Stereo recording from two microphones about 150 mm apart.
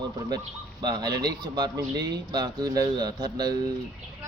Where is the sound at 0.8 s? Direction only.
25° right (ahead or behind).